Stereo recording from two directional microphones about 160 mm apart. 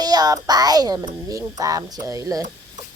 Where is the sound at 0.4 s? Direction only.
25° right (ahead or behind).